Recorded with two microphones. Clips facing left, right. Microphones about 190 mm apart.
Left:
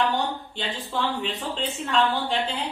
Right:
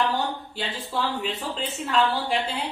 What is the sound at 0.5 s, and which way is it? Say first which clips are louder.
Speech: even; 5° right (ahead or behind).